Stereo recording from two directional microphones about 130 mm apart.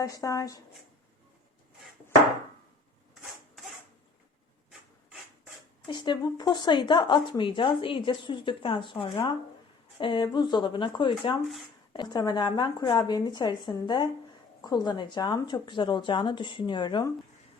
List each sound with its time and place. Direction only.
0.0 s speech: 25° left (ahead or behind)
5.9 s speech: 35° left (ahead or behind)